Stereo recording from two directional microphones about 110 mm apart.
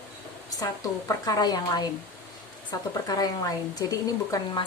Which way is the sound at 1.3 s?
40° left (ahead or behind).